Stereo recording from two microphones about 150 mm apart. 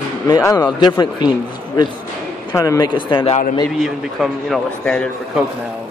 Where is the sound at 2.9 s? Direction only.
35° left (ahead or behind).